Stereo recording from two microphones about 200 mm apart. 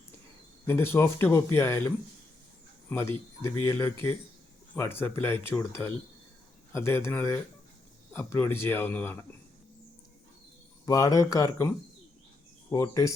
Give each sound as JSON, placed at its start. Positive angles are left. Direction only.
{"t": 0.7, "sound": "speech", "side_deg": 10}
{"t": 2.9, "sound": "speech", "side_deg": 10}
{"t": 10.8, "sound": "speech", "side_deg": 15}
{"t": 12.7, "sound": "speech", "side_deg": 15}